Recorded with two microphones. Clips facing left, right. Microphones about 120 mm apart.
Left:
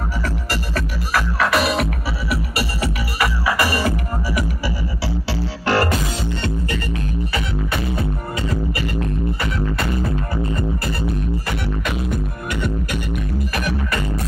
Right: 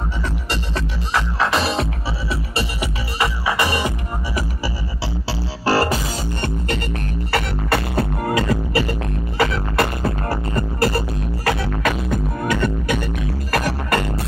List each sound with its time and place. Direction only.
0.7 s music: 25° right (ahead or behind)
5.7 s music: 35° right (ahead or behind)
6.4 s music: 50° right (ahead or behind)
7.3 s music: 75° right (ahead or behind)
10.3 s music: 70° right (ahead or behind)
13.5 s music: 75° right (ahead or behind)